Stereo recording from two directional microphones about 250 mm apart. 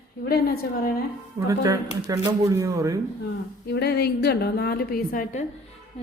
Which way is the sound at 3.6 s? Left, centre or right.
Left.